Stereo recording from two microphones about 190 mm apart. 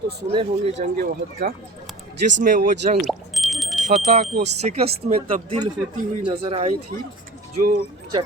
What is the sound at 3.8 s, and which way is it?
Speech, 40° right (ahead or behind).